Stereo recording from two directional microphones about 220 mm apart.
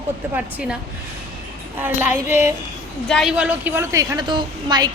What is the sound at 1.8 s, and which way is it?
A woman's voice, 10° right (ahead or behind).